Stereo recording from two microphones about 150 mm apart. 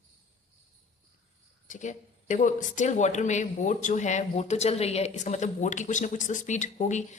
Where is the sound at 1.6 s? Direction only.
55° left (ahead or behind).